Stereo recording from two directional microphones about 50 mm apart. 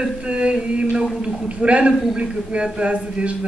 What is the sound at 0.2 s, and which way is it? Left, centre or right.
A man's voice, right.